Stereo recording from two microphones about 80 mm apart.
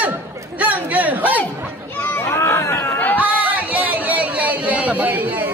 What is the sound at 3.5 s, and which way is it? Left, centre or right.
Chatter, centre.